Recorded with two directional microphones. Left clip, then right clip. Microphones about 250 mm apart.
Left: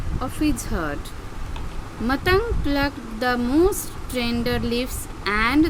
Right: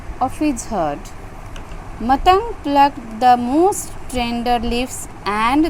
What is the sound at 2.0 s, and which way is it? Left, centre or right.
Speech, centre.